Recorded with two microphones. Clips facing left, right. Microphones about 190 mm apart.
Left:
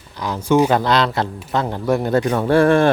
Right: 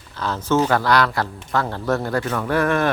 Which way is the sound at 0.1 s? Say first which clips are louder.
Left 3 dB; 15° left (ahead or behind).